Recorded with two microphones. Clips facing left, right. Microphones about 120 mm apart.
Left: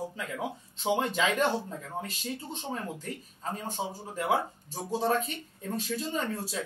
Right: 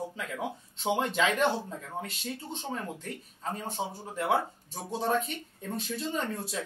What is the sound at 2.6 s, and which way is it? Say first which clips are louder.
Speech: even; centre (ahead or behind).